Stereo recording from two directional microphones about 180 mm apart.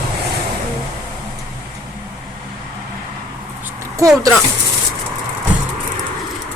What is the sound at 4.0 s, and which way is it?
Speech, 20° right (ahead or behind).